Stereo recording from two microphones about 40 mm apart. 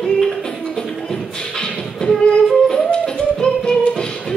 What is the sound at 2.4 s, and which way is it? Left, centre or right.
Music, centre.